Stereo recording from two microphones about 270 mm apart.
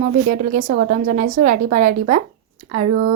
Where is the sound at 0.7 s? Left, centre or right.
Right.